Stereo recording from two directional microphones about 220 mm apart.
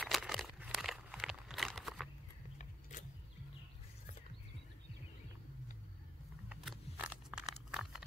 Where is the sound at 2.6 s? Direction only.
35° left (ahead or behind).